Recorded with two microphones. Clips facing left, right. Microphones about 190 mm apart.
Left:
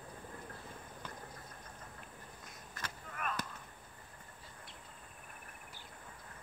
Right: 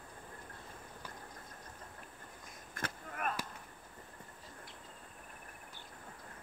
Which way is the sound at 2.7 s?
50° right (ahead or behind).